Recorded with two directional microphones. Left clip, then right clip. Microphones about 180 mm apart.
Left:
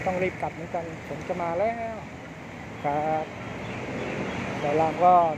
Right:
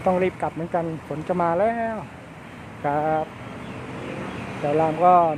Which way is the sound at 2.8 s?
25° right (ahead or behind).